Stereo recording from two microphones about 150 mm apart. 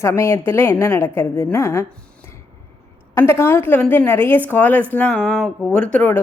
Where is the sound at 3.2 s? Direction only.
15° left (ahead or behind).